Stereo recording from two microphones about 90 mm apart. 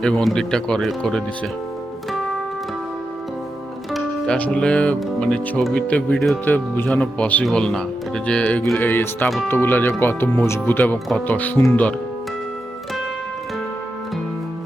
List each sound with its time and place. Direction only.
0.0 s speech: 10° left (ahead or behind)
4.4 s speech: 15° left (ahead or behind)